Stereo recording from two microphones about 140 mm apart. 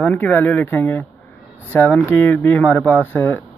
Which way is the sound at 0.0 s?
10° left (ahead or behind).